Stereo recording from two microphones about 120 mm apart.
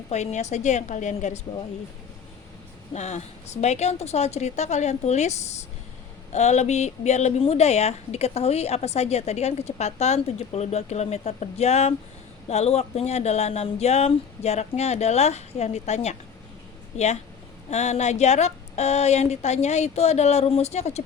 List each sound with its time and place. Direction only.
0.1 s a woman's voice: 70° left (ahead or behind); by 1.4 s 85° left
2.9 s a woman's voice: 70° left (ahead or behind)
17.7 s a woman's voice: 65° left (ahead or behind)